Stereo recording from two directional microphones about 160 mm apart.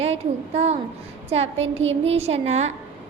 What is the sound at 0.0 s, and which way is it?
A woman's voice, 40° right (ahead or behind).